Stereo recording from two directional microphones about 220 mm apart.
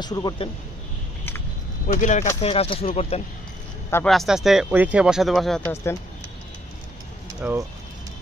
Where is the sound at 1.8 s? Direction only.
35° left (ahead or behind).